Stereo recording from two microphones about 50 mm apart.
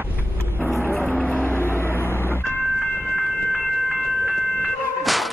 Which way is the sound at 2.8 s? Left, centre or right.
Centre.